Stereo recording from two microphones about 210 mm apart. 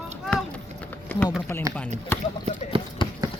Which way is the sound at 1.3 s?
Centre (ahead or behind).